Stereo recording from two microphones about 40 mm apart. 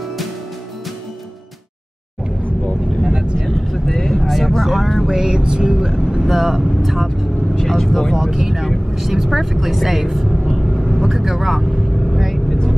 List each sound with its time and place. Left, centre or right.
3.1 s vehicle: right
3.3 s vehicle: centre
5.1 s vehicle: centre
7.5 s speech: centre
8.1 s speech: centre
10.4 s vehicle: centre